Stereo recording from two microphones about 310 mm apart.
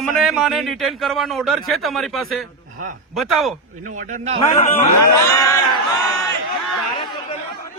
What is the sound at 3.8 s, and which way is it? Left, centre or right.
Speech, right.